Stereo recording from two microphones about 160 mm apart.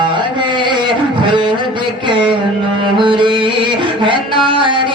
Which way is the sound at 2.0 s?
30° right (ahead or behind).